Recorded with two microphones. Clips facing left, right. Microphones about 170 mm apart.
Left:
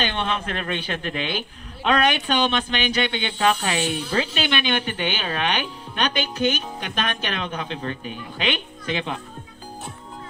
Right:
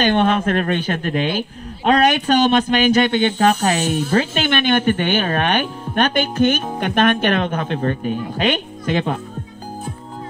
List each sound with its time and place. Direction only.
0.0 s speech: 50° right (ahead or behind)